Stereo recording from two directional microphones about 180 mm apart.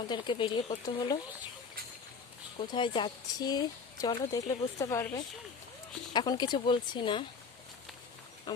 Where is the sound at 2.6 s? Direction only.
25° left (ahead or behind).